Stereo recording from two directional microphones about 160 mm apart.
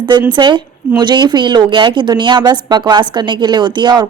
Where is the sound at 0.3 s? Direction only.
30° right (ahead or behind).